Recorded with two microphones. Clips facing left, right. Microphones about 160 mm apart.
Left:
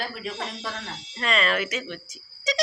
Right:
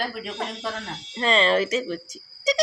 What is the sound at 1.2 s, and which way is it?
Speech, 30° right (ahead or behind).